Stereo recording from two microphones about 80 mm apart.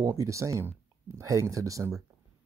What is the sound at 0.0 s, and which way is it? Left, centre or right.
Speech, right.